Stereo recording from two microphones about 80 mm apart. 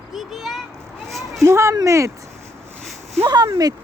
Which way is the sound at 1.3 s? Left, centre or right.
Right.